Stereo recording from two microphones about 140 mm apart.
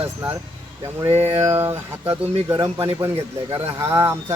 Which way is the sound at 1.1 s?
50° right (ahead or behind).